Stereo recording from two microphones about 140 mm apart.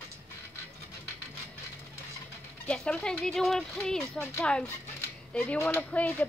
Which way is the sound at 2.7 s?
5° left (ahead or behind).